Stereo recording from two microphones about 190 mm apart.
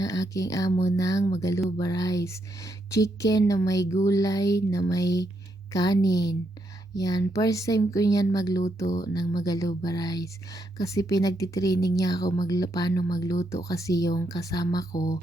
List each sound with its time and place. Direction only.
0.0 s a woman's voice: 20° left (ahead or behind)